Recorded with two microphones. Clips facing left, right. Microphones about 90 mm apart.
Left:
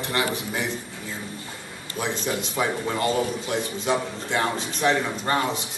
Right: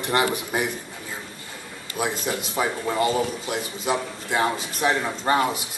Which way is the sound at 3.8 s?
5° right (ahead or behind).